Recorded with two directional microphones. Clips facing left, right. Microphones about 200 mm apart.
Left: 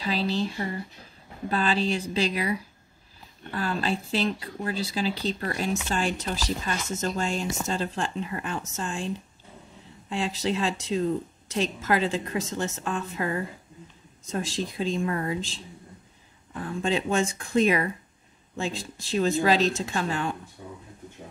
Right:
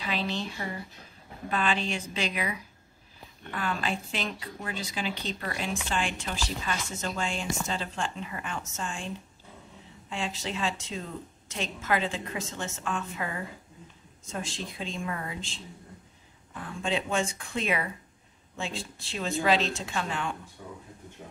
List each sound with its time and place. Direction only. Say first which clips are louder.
0.0 s speech: left 5 dB; 35° left (ahead or behind)
10.0 s speech: left 6 dB; 35° left (ahead or behind)
16.8 s speech: left 4 dB; 40° left (ahead or behind)
20.6 s speech: left 1 dB; 20° left (ahead or behind)